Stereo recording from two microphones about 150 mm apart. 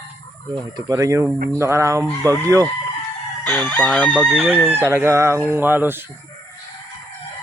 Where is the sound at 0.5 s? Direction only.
25° right (ahead or behind).